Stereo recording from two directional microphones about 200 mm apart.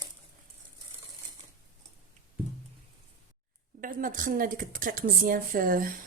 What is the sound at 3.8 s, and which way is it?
A woman's voice, 45° right (ahead or behind).